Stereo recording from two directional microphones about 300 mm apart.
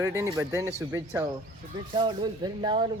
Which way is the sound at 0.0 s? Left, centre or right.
Centre.